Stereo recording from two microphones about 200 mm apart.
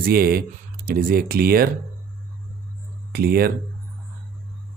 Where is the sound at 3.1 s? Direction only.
50° right (ahead or behind).